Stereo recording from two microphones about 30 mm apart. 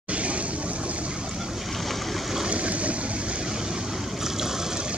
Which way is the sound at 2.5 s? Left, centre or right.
Right.